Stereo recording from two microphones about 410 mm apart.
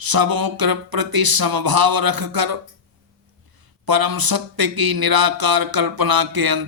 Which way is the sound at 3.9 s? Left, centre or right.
Right.